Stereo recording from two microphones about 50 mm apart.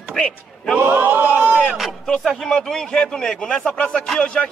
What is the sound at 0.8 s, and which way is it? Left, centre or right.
Speech, right.